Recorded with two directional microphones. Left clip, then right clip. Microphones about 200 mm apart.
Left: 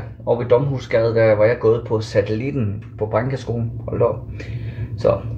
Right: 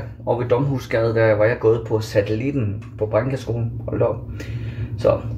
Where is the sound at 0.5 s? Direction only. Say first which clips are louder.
Left 4 dB; centre (ahead or behind).